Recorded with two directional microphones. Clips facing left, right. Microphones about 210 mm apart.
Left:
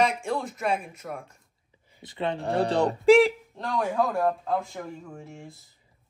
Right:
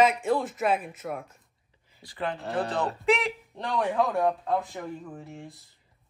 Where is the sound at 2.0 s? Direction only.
25° left (ahead or behind).